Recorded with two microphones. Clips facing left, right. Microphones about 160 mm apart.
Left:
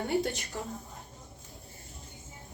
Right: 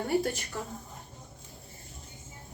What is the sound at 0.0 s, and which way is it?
Speech, 20° left (ahead or behind).